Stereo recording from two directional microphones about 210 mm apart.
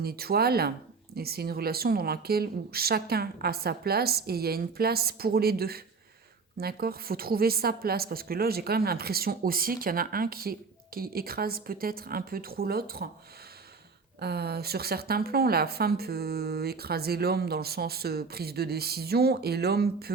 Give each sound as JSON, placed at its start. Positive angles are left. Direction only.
{"t": 0.0, "sound": "a woman's voice", "side_deg": -45}
{"t": 14.2, "sound": "a woman's voice", "side_deg": -50}